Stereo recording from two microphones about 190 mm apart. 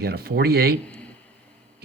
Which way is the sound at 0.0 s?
55° right (ahead or behind).